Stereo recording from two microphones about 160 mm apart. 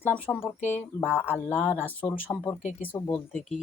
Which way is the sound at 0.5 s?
45° left (ahead or behind).